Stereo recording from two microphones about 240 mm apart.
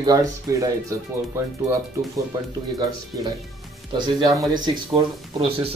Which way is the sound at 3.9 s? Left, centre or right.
Centre.